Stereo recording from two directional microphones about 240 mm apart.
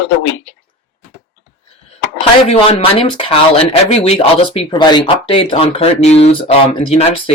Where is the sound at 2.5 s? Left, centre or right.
Left.